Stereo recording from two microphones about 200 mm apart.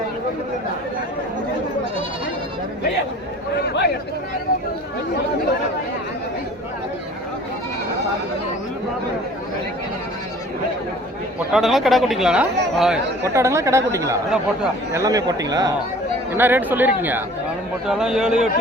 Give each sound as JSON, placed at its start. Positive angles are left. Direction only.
{"t": 3.7, "sound": "speech", "side_deg": 55}
{"t": 11.5, "sound": "speech", "side_deg": 0}
{"t": 13.2, "sound": "speech", "side_deg": -15}